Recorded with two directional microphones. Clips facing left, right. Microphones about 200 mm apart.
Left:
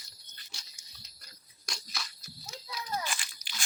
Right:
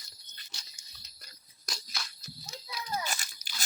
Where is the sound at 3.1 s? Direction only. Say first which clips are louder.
Right 1 dB; 40° right (ahead or behind).